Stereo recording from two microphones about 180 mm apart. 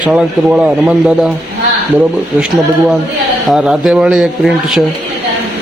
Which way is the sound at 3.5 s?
Centre (ahead or behind).